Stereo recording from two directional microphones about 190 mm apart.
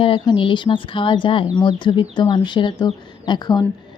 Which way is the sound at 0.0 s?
25° left (ahead or behind).